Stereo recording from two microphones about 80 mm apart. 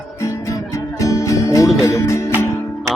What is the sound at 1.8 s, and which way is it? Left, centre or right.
Speech, left.